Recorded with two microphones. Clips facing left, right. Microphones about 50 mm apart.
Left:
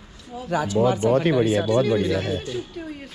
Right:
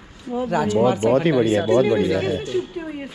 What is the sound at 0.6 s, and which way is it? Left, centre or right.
Speech, right.